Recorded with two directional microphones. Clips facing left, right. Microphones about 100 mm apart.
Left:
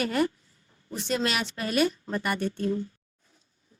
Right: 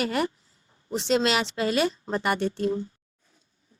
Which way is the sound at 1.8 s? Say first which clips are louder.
Right 1 dB; 25° right (ahead or behind).